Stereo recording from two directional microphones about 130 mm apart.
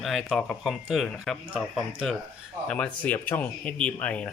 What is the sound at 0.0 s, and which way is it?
Speech, centre (ahead or behind).